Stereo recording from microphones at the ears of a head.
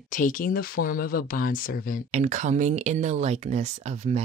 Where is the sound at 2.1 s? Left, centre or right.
Right.